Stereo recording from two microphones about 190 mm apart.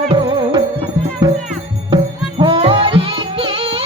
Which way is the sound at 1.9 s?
30° right (ahead or behind).